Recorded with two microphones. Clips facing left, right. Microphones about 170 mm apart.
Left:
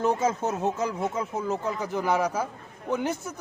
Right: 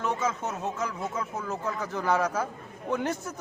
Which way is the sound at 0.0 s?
35° left (ahead or behind).